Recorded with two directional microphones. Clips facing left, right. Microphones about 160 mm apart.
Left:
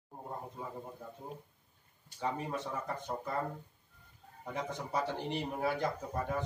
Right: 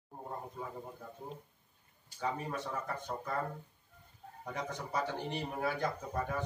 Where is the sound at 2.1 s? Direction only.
Centre (ahead or behind).